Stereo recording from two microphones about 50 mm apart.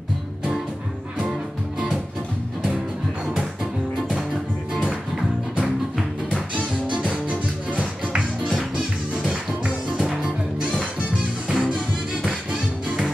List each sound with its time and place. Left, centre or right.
7.2 s music: right; by 11.8 s centre